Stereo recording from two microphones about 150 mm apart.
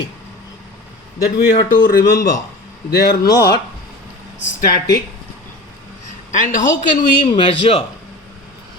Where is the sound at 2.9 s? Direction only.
90° left.